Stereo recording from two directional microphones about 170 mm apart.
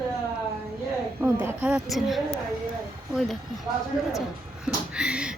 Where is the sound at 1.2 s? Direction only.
10° right (ahead or behind).